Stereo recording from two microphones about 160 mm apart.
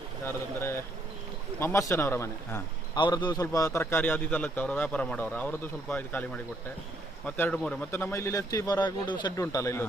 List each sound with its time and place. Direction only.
0.3 s a sound: 15° left (ahead or behind)
1.5 s a man's voice: 15° left (ahead or behind)
3.0 s a man's voice: 30° left (ahead or behind); by 7.9 s 5° left (ahead or behind)
7.9 s a man's voice: 15° left (ahead or behind)